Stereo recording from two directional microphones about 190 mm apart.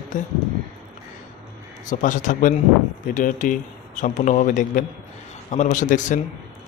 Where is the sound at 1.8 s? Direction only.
40° left (ahead or behind).